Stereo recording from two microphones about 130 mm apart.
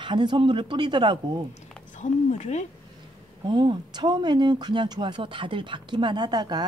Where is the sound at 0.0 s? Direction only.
35° right (ahead or behind).